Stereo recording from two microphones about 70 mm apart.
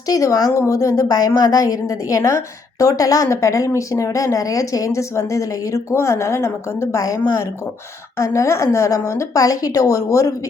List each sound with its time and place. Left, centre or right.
0.1 s a woman's voice: left
7.0 s a woman's voice: left